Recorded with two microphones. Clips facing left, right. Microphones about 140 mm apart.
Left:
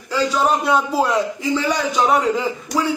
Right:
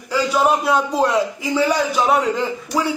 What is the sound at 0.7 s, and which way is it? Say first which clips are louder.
Speech: even; centre (ahead or behind).